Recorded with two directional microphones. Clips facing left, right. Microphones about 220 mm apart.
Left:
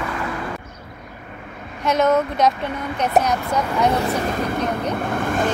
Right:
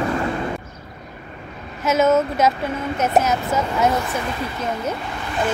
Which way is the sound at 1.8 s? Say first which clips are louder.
Right 1 dB; 5° right (ahead or behind).